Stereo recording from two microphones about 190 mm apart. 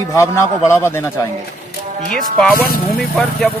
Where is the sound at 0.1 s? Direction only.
15° left (ahead or behind).